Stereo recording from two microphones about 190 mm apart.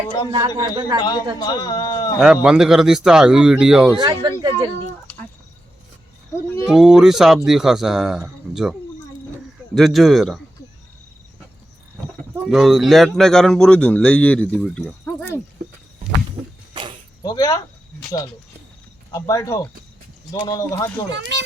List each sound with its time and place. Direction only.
0.3 s speech: 20° right (ahead or behind)
1.4 s speech: 20° left (ahead or behind)
2.1 s speech: 5° right (ahead or behind)
3.9 s speech: 25° right (ahead or behind)
5.1 s a sound: 5° left (ahead or behind)
6.7 s speech: 5° right (ahead or behind)
9.7 s speech: centre (ahead or behind)
12.5 s speech: centre (ahead or behind)
17.2 s speech: 20° left (ahead or behind)
19.1 s speech: 15° left (ahead or behind)
21.1 s speech: 70° right (ahead or behind)